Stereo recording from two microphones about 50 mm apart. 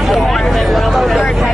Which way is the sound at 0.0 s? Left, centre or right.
Centre.